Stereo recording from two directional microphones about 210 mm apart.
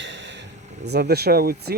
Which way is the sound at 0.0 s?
60° right (ahead or behind).